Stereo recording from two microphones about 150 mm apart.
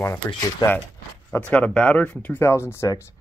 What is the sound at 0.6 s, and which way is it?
Speech, 30° left (ahead or behind).